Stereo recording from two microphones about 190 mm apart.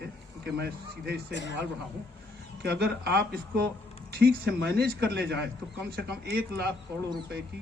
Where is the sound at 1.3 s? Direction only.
65° left (ahead or behind).